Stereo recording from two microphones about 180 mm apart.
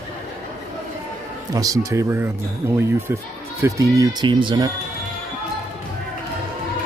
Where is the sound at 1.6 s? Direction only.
20° right (ahead or behind).